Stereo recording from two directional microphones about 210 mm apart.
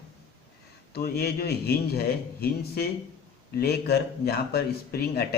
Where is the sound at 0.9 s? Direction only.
50° left (ahead or behind).